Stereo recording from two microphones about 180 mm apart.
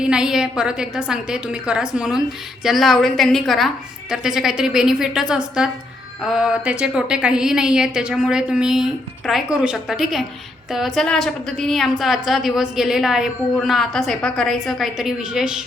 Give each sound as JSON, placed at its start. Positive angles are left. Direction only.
{"t": 0.0, "sound": "a woman's voice", "side_deg": -5}